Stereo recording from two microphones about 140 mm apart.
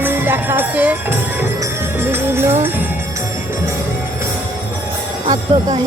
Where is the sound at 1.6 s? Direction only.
15° right (ahead or behind).